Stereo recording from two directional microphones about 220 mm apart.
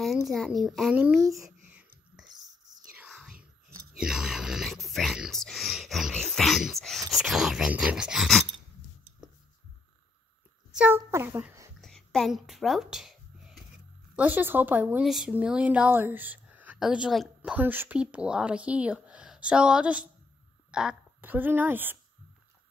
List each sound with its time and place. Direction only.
0.3 s a sound: centre (ahead or behind)
2.3 s whispering: 20° right (ahead or behind)
3.0 s whispering: 5° right (ahead or behind)
4.0 s speech: centre (ahead or behind)
10.7 s a child's voice: 5° right (ahead or behind)
11.8 s a sound: centre (ahead or behind)
14.1 s a woman's voice: 10° right (ahead or behind)